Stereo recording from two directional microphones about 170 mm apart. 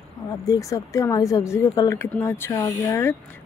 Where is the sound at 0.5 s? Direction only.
20° left (ahead or behind).